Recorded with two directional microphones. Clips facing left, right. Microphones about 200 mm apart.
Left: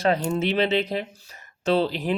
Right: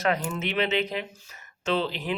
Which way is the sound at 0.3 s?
30° left (ahead or behind).